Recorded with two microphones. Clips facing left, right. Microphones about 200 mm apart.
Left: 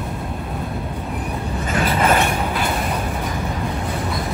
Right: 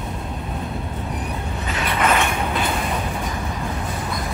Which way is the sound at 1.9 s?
35° left (ahead or behind).